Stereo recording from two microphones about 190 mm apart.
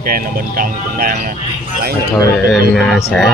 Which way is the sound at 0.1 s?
50° right (ahead or behind).